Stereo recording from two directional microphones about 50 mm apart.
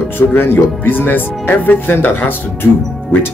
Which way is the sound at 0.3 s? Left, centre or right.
Left.